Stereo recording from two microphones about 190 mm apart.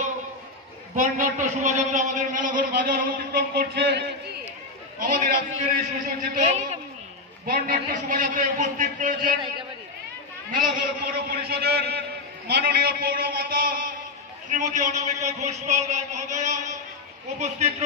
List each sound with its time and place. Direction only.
0.9 s a man's voice: 45° right (ahead or behind); by 4.0 s 60° right (ahead or behind)
4.9 s a man's voice: 45° right (ahead or behind)
7.4 s a man's voice: 50° right (ahead or behind)
10.8 s a man's voice: 50° right (ahead or behind); by 17.8 s 35° right (ahead or behind)